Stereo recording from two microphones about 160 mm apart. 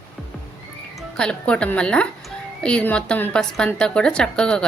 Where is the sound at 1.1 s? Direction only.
5° left (ahead or behind).